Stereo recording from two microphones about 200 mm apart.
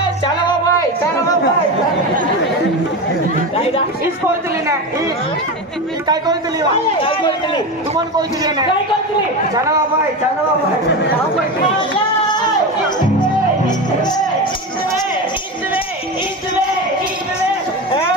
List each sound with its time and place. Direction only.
0.2 s music: 20° left (ahead or behind)
3.5 s chatter: 30° left (ahead or behind)
7.0 s speech: 25° left (ahead or behind)
8.2 s a woman's voice: 20° right (ahead or behind)
13.7 s music: 20° left (ahead or behind)